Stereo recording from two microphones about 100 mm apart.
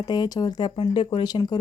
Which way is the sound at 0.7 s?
65° left (ahead or behind).